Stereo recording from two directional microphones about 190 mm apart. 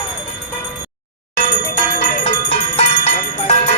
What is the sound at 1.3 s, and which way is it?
Bell, 45° left (ahead or behind).